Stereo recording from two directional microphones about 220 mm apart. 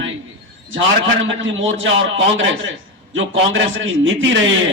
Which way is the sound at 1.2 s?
60° right (ahead or behind).